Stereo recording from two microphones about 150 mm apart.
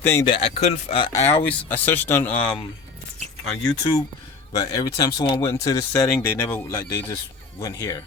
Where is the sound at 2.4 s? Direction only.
30° left (ahead or behind).